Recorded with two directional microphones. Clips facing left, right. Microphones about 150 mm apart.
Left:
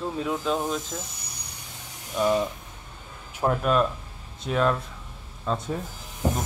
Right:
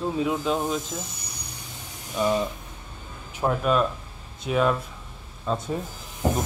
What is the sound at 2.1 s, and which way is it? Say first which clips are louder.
Speech: left 1 dB; centre (ahead or behind).